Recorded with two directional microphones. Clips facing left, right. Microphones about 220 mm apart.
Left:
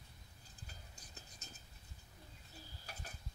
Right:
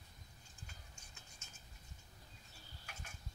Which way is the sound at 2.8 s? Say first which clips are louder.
Left 2 dB; 35° left (ahead or behind).